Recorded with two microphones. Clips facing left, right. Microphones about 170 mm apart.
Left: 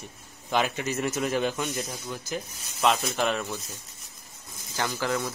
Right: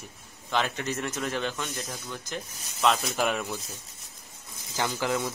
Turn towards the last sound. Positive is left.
turn(degrees=-15)  # may be behind; listen again after turning